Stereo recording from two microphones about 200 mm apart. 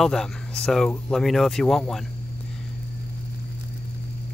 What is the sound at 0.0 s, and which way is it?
Speech, centre (ahead or behind).